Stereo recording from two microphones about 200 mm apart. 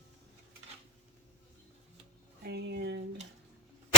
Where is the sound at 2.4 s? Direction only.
55° right (ahead or behind).